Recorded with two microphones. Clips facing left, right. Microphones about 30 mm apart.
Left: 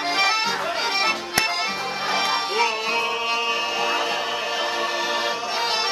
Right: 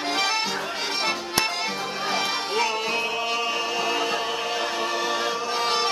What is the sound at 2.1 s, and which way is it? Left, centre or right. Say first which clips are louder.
Music: left 3 dB; centre.